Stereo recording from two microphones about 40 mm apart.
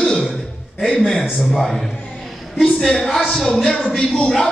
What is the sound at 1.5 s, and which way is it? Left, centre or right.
A woman's voice, centre.